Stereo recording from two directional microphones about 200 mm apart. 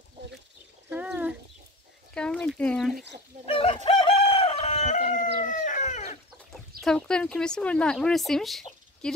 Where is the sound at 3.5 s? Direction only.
25° left (ahead or behind).